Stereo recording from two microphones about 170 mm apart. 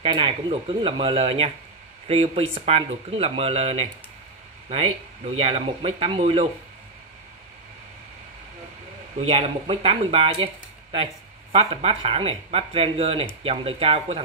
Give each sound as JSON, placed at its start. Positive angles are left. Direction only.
{"t": 0.0, "sound": "speech", "side_deg": -30}
{"t": 9.3, "sound": "speech", "side_deg": -35}